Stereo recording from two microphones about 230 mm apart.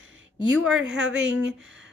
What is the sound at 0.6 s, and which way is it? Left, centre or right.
Speech, centre.